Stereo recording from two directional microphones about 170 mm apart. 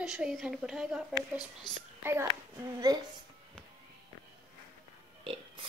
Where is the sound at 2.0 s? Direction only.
15° right (ahead or behind).